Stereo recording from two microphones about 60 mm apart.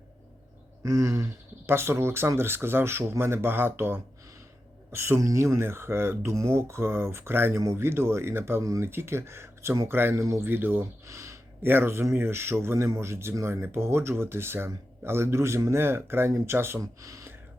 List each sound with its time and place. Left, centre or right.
0.8 s a sound: right
1.6 s speech: right
5.2 s speech: right
10.2 s speech: right
10.4 s speech: right
11.0 s a sound: right
11.6 s speech: right
16.8 s speech: right